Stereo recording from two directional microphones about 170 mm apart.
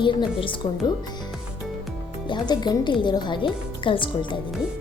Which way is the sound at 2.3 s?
25° left (ahead or behind).